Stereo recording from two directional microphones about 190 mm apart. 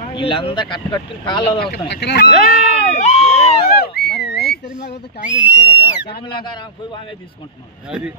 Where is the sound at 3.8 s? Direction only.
60° left (ahead or behind).